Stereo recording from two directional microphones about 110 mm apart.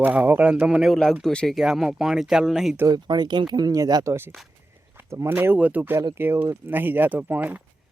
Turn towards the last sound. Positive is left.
turn(degrees=-15)  # may be behind; listen again after turning